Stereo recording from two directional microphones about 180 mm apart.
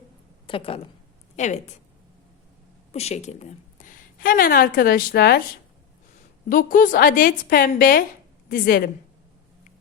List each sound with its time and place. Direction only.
0.4 s a woman's voice: 30° left (ahead or behind)
1.4 s speech: 40° left (ahead or behind)
2.9 s a woman's voice: 35° left (ahead or behind); by 5.4 s 60° left (ahead or behind)
6.5 s a woman's voice: 50° left (ahead or behind)